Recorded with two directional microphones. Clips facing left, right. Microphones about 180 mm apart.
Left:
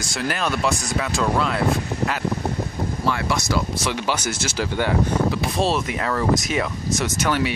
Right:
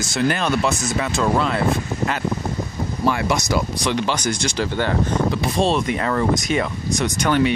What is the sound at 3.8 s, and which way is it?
Speech, 5° left (ahead or behind).